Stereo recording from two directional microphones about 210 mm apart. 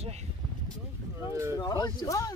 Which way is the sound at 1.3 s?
15° right (ahead or behind).